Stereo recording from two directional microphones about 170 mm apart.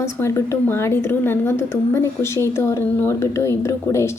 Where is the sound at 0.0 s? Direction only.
15° left (ahead or behind).